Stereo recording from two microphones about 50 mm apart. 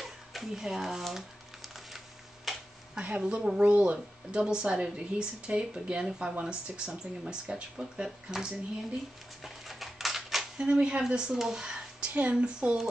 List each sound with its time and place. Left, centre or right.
0.0 s speech: centre
2.5 s a sound: centre
3.2 s a woman's voice: centre
9.4 s dog: centre
10.6 s a woman's voice: centre
11.3 s a sound: centre
12.2 s speech: right